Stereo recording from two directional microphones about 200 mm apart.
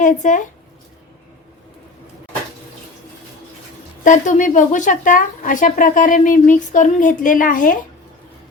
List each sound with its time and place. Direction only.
0.0 s speech: 40° left (ahead or behind)
4.0 s speech: 40° left (ahead or behind)